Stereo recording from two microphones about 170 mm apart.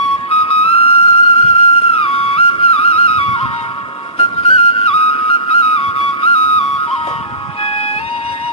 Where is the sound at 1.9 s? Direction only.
35° left (ahead or behind).